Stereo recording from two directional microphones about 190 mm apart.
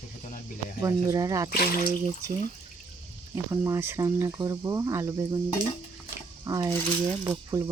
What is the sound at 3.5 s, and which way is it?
Speech, 15° right (ahead or behind).